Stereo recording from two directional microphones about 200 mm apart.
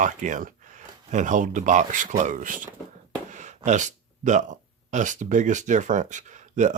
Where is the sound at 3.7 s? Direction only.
40° right (ahead or behind).